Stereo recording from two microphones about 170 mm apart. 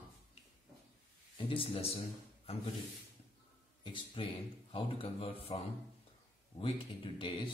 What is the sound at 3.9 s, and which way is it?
Speech, 30° left (ahead or behind).